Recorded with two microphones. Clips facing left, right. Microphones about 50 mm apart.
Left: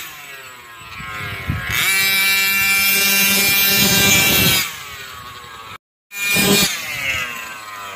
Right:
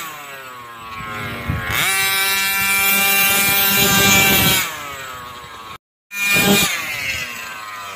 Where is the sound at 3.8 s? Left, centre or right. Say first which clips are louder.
Right 3 dB; right.